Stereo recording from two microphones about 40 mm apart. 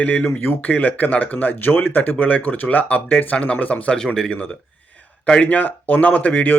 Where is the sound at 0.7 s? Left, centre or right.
Left.